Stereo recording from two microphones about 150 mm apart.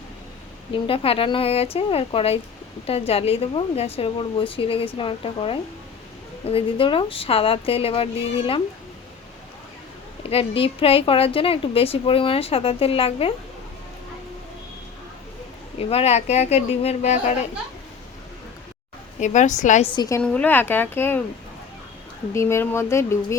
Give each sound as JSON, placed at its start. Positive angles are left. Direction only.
{"t": 0.7, "sound": "a woman's voice", "side_deg": 35}
{"t": 10.2, "sound": "a woman's voice", "side_deg": 40}
{"t": 15.8, "sound": "a woman's voice", "side_deg": 40}
{"t": 19.2, "sound": "a woman's voice", "side_deg": 55}
{"t": 19.8, "sound": "a woman's voice", "side_deg": 35}
{"t": 20.2, "sound": "speech", "side_deg": 10}
{"t": 22.4, "sound": "speech", "side_deg": 20}